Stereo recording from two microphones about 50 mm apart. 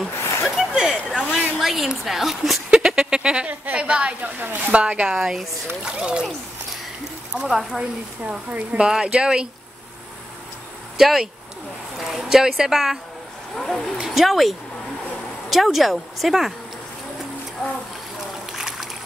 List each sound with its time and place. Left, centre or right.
0.0 s a sound: centre
0.7 s a sound: centre
1.6 s a woman's voice: centre
3.0 s a woman's voice: centre
5.0 s speech: centre
7.3 s speech: centre
8.3 s speech: centre
11.0 s speech: centre
13.6 s a woman's voice: centre
15.5 s a woman's voice: centre
18.5 s a sound: centre